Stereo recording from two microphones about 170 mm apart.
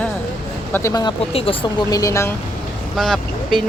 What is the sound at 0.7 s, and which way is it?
Speech, 20° left (ahead or behind).